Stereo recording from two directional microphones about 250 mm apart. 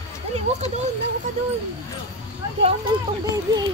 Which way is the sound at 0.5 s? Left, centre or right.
Right.